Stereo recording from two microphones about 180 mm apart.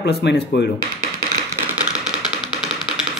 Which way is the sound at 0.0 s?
70° left (ahead or behind).